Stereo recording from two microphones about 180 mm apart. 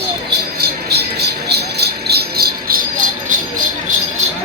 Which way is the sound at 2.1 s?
60° right (ahead or behind).